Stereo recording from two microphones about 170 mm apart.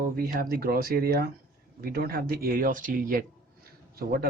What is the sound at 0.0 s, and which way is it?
Speech, 55° right (ahead or behind).